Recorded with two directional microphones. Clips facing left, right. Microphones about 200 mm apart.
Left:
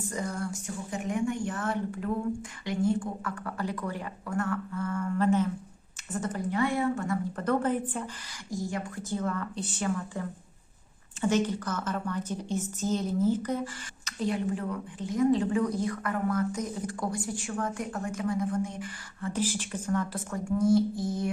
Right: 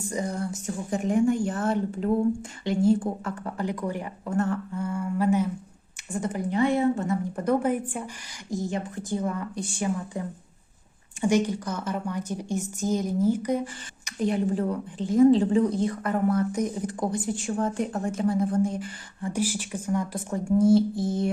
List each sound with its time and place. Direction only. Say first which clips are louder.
0.1 s a woman's voice: right 5 dB; 20° right (ahead or behind)
0.7 s a woman's voice: right 8 dB; 35° right (ahead or behind)
4.8 s a woman's voice: right 1 dB; 10° right (ahead or behind)
14.5 s a woman's voice: right 6 dB; 30° right (ahead or behind)
16.5 s a woman's voice: right 5 dB; 15° right (ahead or behind); by 18.9 s 35° right (ahead or behind)
19.2 s a woman's voice: right 3 dB; 10° right (ahead or behind)
20.3 s a woman's voice: right 5 dB; 30° right (ahead or behind)